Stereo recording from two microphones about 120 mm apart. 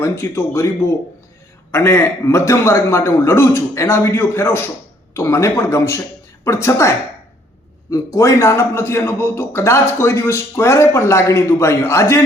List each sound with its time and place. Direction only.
0.0 s a man's voice: 20° left (ahead or behind)